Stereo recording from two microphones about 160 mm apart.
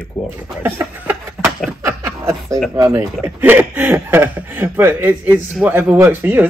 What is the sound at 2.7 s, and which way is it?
Speech, 20° right (ahead or behind).